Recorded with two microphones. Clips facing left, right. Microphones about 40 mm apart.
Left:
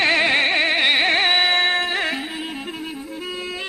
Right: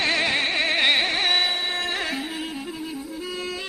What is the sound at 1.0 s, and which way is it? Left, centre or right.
Music, left.